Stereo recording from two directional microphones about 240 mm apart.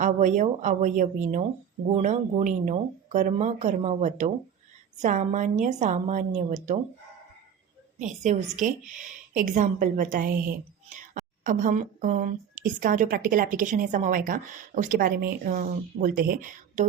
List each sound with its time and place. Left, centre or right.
0.0 s a woman's voice: right
7.9 s a woman's voice: right